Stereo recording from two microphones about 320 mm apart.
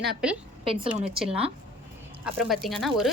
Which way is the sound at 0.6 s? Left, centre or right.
Centre.